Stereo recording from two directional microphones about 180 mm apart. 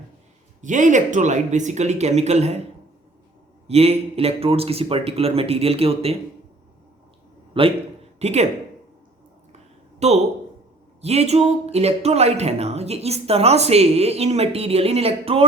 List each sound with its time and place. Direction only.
0.6 s speech: 45° right (ahead or behind)
3.7 s speech: 35° right (ahead or behind)
7.6 s a man's voice: 30° right (ahead or behind)
10.0 s speech: 40° right (ahead or behind)